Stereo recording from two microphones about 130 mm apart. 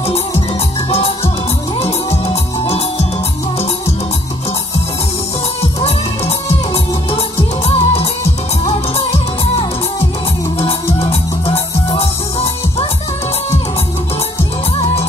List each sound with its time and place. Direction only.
0.8 s music: 50° left (ahead or behind)
5.9 s music: 50° left (ahead or behind)
11.0 s music: 50° left (ahead or behind)